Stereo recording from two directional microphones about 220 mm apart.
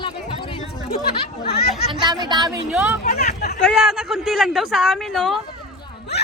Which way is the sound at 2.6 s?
5° right (ahead or behind).